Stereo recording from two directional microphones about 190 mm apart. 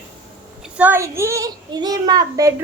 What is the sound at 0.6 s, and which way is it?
A child's voice, 10° right (ahead or behind).